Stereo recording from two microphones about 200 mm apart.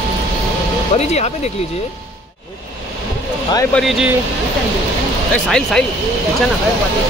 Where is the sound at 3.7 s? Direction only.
Centre (ahead or behind).